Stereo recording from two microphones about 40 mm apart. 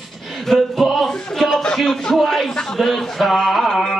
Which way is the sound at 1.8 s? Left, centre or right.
Centre.